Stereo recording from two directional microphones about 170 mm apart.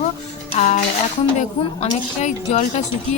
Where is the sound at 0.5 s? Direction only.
45° left (ahead or behind).